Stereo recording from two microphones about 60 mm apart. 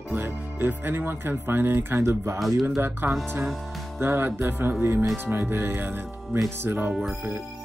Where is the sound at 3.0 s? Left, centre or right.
Right.